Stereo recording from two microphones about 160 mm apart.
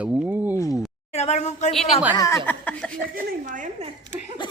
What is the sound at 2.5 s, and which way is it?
Speech, 10° left (ahead or behind).